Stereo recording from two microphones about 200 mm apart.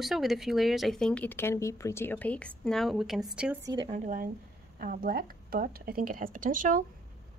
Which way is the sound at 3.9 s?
40° right (ahead or behind).